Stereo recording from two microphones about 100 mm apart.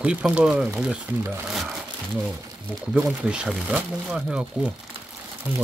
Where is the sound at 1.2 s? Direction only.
20° right (ahead or behind).